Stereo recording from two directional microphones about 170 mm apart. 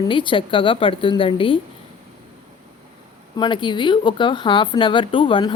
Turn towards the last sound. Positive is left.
turn(degrees=30)  # may be behind; listen again after turning